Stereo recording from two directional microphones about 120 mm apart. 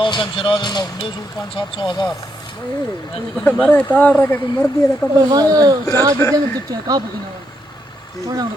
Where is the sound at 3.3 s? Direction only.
10° left (ahead or behind).